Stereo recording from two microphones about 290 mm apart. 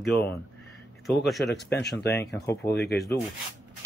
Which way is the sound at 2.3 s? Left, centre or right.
Centre.